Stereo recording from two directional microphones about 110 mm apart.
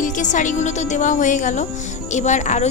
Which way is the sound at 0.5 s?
90° left.